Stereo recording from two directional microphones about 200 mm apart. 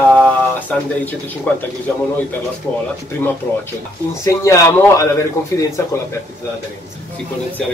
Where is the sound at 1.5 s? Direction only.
5° left (ahead or behind).